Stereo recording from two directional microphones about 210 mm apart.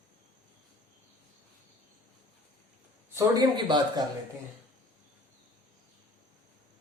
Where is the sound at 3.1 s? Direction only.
15° right (ahead or behind).